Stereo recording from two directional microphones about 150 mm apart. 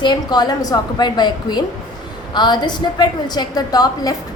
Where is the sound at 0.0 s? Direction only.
30° left (ahead or behind).